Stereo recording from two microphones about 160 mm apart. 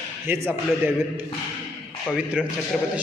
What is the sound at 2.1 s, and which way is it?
Speech, 5° right (ahead or behind).